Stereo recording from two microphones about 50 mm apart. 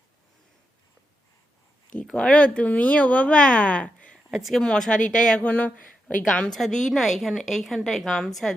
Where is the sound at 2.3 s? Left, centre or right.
Left.